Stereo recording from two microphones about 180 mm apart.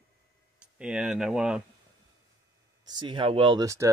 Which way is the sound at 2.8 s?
25° right (ahead or behind).